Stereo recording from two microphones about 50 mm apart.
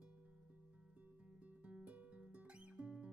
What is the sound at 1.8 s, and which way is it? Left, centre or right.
Music, right.